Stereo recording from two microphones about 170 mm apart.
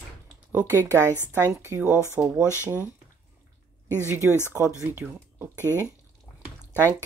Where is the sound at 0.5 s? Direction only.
15° right (ahead or behind).